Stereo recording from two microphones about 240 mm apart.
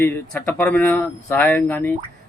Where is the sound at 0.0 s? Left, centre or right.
Centre.